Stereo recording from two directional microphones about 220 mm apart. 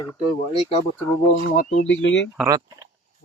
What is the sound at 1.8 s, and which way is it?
Speech, 55° left (ahead or behind).